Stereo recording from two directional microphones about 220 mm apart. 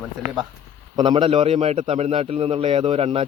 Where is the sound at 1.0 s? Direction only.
25° right (ahead or behind).